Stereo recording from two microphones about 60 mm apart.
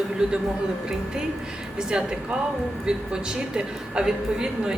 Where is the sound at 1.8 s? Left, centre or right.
Centre.